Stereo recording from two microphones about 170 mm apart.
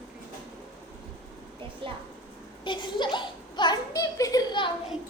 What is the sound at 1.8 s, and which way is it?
Speech, 30° right (ahead or behind).